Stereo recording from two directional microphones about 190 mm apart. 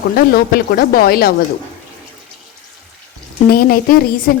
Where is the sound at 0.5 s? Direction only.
50° left (ahead or behind).